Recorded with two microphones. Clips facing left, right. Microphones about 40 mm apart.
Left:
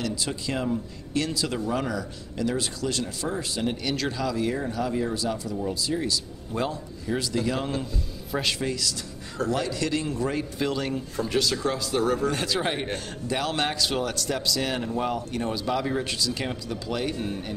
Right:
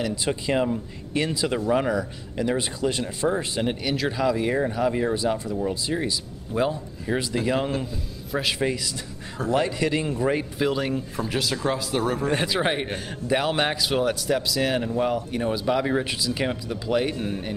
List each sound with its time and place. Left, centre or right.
0.0 s speech: right
3.8 s speech: centre
4.2 s speech: right
6.5 s speech: centre
7.1 s a man's voice: right
8.5 s speech: centre